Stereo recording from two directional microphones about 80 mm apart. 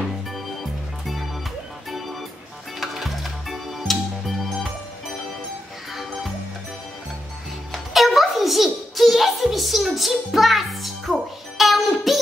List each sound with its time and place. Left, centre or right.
1.9 s music: centre
7.7 s music: centre